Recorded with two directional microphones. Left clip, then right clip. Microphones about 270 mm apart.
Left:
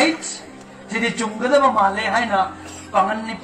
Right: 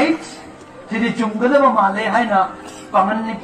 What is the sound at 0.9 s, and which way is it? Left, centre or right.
A man's voice, left.